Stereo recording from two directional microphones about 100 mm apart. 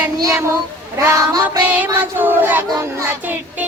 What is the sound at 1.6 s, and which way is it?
Speech, 15° right (ahead or behind).